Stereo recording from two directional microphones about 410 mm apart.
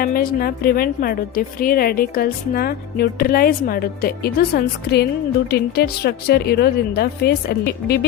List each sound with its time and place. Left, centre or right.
0.0 s a woman's voice: left